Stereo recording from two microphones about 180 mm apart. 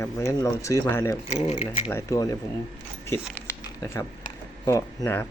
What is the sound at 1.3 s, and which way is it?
Speech, 35° left (ahead or behind).